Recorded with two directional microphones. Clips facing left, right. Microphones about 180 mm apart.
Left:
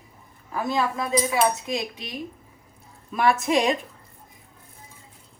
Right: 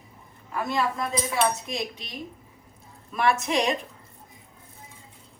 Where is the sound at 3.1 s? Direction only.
Centre (ahead or behind).